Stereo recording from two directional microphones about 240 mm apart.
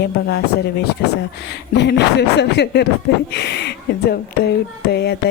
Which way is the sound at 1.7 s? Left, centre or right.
Left.